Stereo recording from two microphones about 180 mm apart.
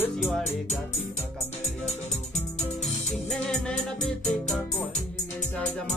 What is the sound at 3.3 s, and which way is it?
Music, 5° left (ahead or behind).